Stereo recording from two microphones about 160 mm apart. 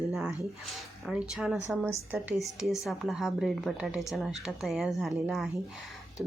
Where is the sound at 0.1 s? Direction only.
5° right (ahead or behind).